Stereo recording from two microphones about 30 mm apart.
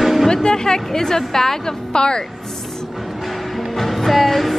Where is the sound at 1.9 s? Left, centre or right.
Left.